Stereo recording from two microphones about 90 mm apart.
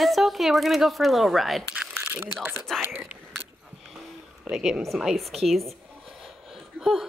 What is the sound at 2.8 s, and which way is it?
Speech, 20° right (ahead or behind).